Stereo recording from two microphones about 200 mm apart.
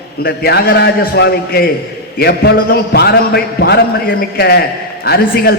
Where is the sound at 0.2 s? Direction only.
50° left (ahead or behind).